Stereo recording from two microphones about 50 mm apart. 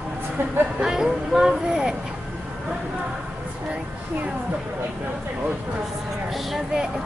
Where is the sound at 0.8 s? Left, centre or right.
Centre.